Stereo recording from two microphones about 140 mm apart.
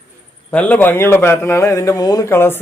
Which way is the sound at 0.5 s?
10° left (ahead or behind).